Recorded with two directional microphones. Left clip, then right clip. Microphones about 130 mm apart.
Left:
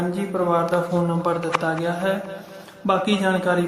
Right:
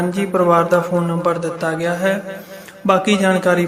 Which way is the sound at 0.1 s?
25° right (ahead or behind).